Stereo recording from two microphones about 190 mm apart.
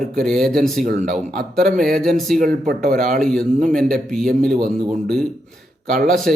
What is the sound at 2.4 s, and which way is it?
Speech, 50° right (ahead or behind).